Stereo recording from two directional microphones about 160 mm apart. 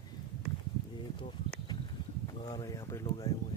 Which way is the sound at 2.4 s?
25° left (ahead or behind).